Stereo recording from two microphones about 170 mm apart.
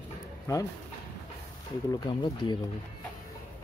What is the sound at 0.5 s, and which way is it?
Speech, 20° left (ahead or behind).